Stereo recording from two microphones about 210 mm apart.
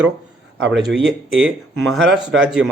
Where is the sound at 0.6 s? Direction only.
60° right (ahead or behind).